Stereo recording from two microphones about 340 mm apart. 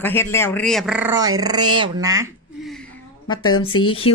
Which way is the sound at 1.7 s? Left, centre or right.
Centre.